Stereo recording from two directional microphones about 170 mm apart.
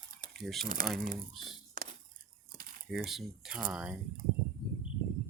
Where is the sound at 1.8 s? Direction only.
55° right (ahead or behind).